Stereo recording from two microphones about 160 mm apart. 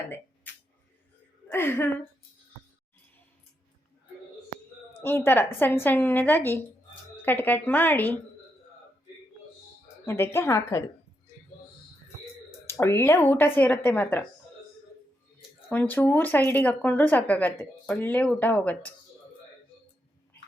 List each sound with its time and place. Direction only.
0.5 s a sound: 10° left (ahead or behind)
1.5 s a woman's voice: 15° left (ahead or behind)
5.0 s speech: 15° left (ahead or behind)
10.1 s speech: 15° left (ahead or behind)
12.6 s speech: 15° left (ahead or behind)
15.7 s speech: 10° left (ahead or behind)